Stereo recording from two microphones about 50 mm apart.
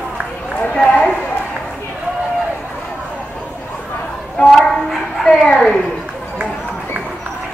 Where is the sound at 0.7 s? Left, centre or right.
Centre.